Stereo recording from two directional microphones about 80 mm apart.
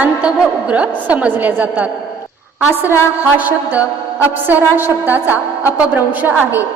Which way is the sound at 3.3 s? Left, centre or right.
Right.